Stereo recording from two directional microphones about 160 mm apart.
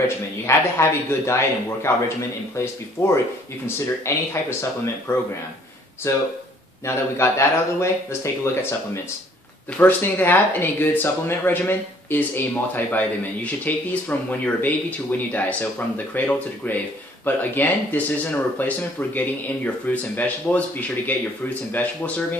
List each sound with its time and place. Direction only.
0.5 s speech: 15° left (ahead or behind)
21.8 s speech: 10° left (ahead or behind)